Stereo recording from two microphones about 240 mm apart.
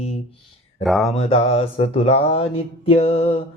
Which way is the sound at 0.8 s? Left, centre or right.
Centre.